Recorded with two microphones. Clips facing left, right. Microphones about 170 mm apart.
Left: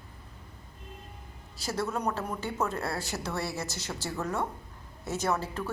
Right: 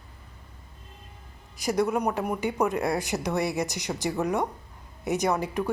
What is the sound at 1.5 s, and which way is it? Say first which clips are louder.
A woman's voice: right 7 dB; 15° right (ahead or behind).